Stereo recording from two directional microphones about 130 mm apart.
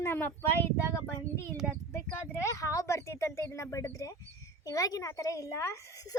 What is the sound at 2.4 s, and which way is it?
Speech, 25° left (ahead or behind).